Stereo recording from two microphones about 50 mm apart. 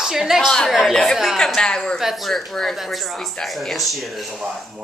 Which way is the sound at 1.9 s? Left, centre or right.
Centre.